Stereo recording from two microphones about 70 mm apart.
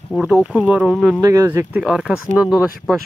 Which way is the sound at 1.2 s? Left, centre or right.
Right.